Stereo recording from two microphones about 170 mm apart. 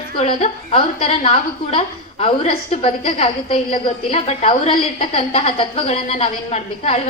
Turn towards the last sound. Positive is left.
turn(degrees=35)  # may be behind; listen again after turning